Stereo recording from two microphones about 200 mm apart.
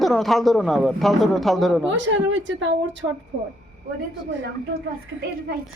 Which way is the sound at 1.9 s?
65° right (ahead or behind).